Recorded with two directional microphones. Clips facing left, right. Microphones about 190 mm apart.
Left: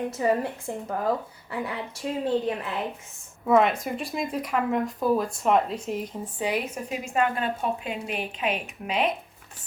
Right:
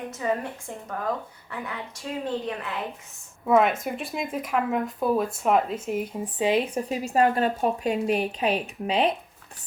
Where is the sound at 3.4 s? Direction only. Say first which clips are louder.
Even; centre (ahead or behind).